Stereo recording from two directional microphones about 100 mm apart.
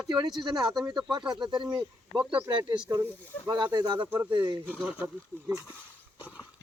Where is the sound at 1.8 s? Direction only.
10° right (ahead or behind).